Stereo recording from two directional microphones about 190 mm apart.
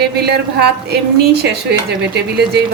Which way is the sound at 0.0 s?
60° right (ahead or behind).